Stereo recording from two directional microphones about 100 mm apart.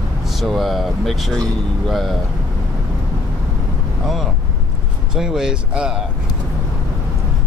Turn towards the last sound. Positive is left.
turn(degrees=-5)  # may be behind; listen again after turning